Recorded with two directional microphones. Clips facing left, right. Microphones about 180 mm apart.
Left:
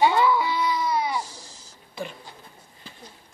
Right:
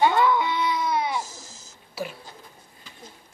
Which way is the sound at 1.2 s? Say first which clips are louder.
Even; 45° right (ahead or behind).